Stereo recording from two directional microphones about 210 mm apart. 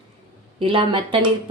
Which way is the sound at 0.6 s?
25° right (ahead or behind).